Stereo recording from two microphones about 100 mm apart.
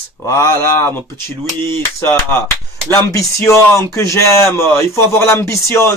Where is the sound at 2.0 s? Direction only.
20° left (ahead or behind).